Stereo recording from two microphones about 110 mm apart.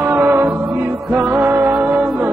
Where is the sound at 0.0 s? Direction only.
20° right (ahead or behind).